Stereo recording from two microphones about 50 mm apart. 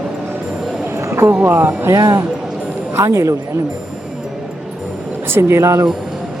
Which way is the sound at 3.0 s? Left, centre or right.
Right.